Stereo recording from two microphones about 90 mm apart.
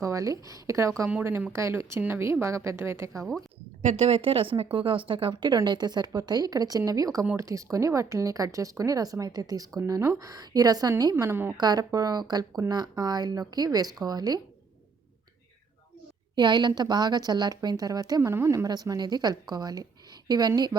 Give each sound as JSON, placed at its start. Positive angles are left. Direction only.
{"t": 0.0, "sound": "a woman's voice", "side_deg": -35}
{"t": 4.2, "sound": "a woman's voice", "side_deg": -85}
{"t": 11.5, "sound": "a woman's voice", "side_deg": -50}
{"t": 16.3, "sound": "a woman's voice", "side_deg": -55}
{"t": 18.2, "sound": "a woman's voice", "side_deg": -30}